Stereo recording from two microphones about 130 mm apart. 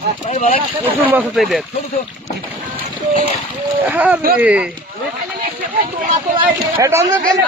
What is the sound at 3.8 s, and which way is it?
Speech, 10° right (ahead or behind).